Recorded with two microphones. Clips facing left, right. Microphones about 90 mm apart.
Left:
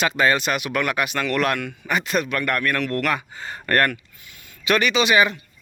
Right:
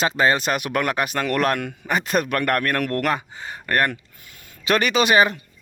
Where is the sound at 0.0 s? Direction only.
30° right (ahead or behind).